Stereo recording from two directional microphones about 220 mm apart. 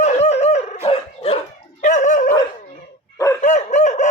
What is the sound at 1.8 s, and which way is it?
Dog, 35° left (ahead or behind).